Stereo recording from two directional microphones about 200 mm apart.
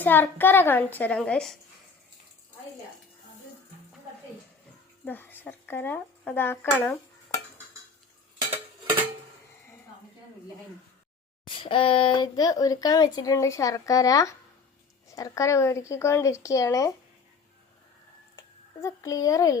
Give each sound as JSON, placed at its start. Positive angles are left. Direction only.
{"t": 0.0, "sound": "a woman's voice", "side_deg": 10}
{"t": 5.0, "sound": "speech", "side_deg": 10}
{"t": 11.4, "sound": "a woman's voice", "side_deg": 25}
{"t": 18.3, "sound": "speech", "side_deg": 15}